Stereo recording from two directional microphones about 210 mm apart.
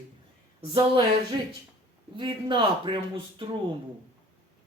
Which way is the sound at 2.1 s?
25° right (ahead or behind).